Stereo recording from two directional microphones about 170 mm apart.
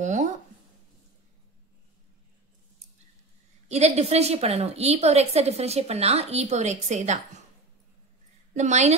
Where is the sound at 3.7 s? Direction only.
40° right (ahead or behind).